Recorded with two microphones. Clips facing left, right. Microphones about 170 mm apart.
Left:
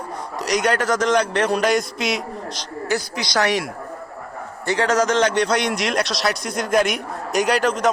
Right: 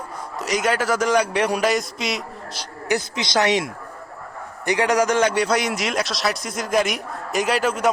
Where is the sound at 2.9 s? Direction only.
20° right (ahead or behind).